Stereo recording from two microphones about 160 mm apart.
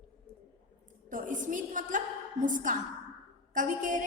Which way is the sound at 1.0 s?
55° right (ahead or behind).